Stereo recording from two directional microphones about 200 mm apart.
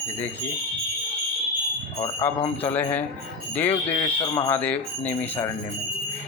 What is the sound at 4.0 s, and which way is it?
Speech, 20° left (ahead or behind).